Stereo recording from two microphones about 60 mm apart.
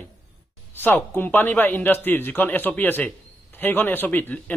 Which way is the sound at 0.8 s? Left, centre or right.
Left.